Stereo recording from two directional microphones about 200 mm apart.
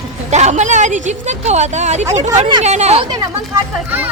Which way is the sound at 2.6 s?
35° right (ahead or behind).